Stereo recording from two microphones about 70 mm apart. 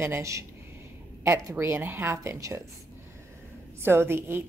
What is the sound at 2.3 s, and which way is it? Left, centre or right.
Speech, right.